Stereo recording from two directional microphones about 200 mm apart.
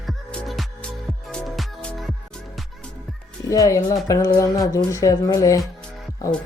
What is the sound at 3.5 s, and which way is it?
Speech, 15° left (ahead or behind).